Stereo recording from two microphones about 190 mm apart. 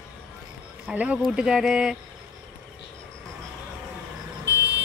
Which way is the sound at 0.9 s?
5° right (ahead or behind).